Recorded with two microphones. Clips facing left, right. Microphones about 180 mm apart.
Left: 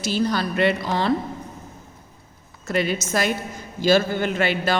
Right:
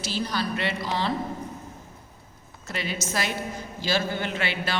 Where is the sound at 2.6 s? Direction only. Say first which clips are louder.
Left 8 dB; 50° left (ahead or behind).